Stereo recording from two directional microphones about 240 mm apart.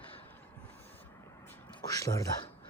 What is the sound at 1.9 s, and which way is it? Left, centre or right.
Speech, centre.